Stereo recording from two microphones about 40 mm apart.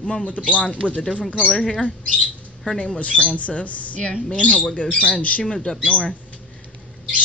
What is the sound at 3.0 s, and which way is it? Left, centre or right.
Speech, left.